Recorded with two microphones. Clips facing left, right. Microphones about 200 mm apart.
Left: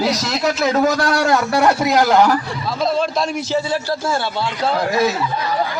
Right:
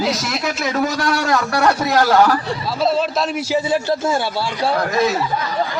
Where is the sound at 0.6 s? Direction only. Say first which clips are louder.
Left 3 dB; 40° left (ahead or behind).